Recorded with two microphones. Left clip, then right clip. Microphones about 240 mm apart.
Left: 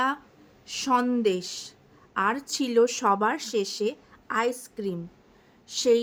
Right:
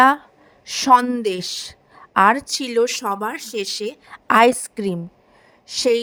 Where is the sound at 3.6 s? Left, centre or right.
Right.